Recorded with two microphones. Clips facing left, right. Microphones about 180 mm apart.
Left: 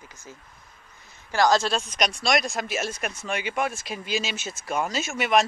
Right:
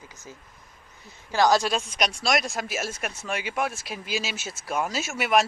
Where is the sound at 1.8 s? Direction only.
Centre (ahead or behind).